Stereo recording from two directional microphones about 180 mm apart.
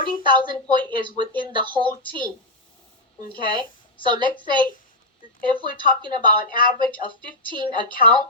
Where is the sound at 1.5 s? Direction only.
25° right (ahead or behind).